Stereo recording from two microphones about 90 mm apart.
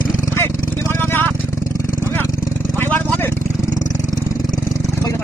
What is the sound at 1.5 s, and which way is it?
Vehicle, 35° left (ahead or behind).